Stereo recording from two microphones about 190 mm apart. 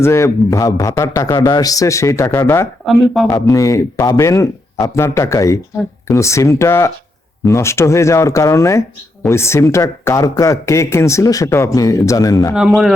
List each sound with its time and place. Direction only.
0.0 s speech: 15° left (ahead or behind)
3.3 s speech: 20° left (ahead or behind)
12.5 s speech: centre (ahead or behind)